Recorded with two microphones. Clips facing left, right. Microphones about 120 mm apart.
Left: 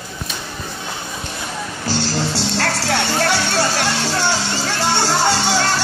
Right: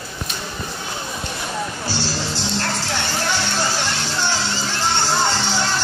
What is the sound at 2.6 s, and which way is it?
Music, 75° left (ahead or behind).